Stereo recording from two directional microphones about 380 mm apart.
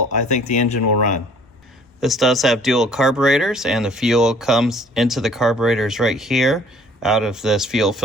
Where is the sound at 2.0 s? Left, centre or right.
Centre.